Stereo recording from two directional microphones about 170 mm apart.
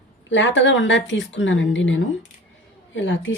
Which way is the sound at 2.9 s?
90° left.